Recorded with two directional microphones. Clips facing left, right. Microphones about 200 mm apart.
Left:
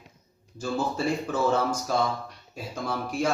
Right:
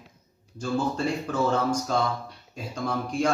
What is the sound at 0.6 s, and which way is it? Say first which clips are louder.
Speech: right 1 dB; 5° left (ahead or behind).